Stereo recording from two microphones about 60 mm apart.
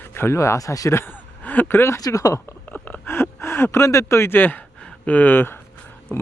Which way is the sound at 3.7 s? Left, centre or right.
Left.